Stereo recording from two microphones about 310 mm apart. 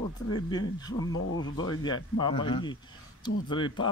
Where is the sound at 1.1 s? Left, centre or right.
Left.